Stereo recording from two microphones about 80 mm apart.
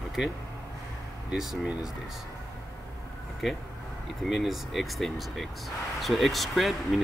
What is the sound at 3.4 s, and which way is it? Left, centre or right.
Speech, centre.